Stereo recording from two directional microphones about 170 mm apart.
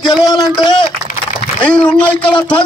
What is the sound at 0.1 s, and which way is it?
Speech, 25° left (ahead or behind).